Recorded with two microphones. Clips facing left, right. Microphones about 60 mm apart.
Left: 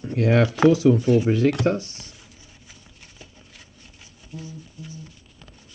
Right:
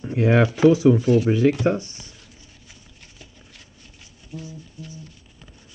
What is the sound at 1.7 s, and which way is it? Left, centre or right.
Speech, right.